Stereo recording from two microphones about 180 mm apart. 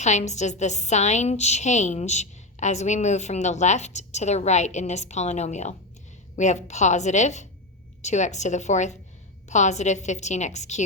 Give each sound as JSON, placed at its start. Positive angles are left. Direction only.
{"t": 0.0, "sound": "a woman's voice", "side_deg": 40}